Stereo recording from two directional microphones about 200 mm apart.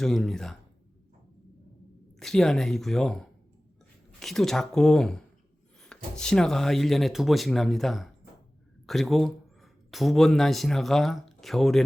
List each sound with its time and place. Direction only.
0.0 s speech: centre (ahead or behind)
2.1 s speech: centre (ahead or behind)